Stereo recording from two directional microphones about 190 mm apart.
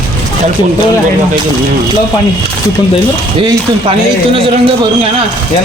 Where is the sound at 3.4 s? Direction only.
30° right (ahead or behind).